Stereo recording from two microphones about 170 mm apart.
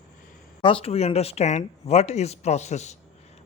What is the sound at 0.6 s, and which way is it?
Speech, 30° left (ahead or behind).